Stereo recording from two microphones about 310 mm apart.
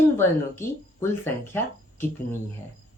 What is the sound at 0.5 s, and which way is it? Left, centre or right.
Speech, centre.